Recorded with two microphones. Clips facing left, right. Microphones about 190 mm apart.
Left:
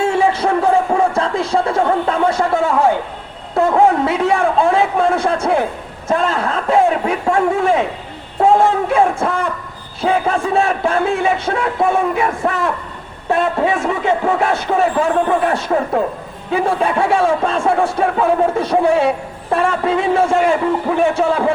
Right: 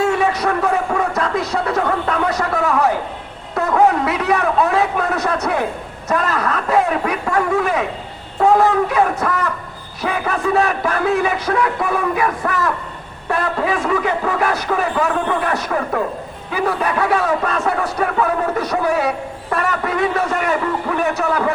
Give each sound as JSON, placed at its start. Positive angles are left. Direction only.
{"t": 0.0, "sound": "music", "side_deg": 25}
{"t": 3.5, "sound": "a sound", "side_deg": 25}
{"t": 6.1, "sound": "speech", "side_deg": 25}